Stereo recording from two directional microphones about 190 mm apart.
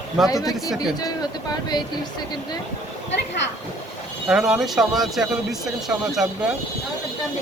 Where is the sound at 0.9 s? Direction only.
20° left (ahead or behind).